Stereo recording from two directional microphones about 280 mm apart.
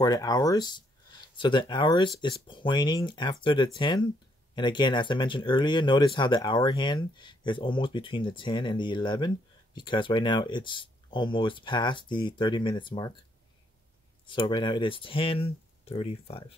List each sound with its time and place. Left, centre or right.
0.0 s speech: centre
14.2 s speech: centre